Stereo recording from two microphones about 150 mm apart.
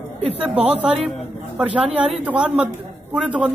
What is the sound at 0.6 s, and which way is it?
A woman's voice, 10° right (ahead or behind).